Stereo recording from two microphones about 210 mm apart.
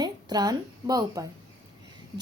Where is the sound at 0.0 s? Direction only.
20° right (ahead or behind).